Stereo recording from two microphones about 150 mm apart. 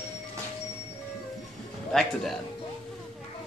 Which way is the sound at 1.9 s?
Centre (ahead or behind).